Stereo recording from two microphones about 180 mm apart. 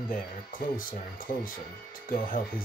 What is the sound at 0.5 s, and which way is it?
Speech, 50° left (ahead or behind).